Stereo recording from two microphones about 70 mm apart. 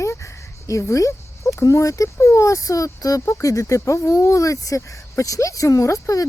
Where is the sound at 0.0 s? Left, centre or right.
Left.